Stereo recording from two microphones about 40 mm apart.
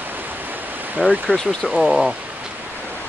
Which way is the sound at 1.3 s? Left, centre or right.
Right.